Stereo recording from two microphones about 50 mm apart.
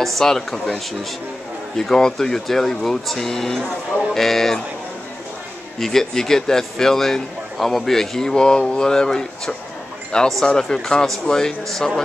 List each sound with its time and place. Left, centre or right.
0.0 s a man's voice: centre
1.8 s a man's voice: centre
5.8 s a man's voice: centre